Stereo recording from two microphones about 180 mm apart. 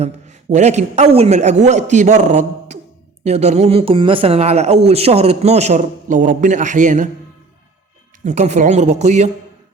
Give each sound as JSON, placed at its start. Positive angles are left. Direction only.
{"t": 0.0, "sound": "a man's voice", "side_deg": -40}
{"t": 8.2, "sound": "a man's voice", "side_deg": -40}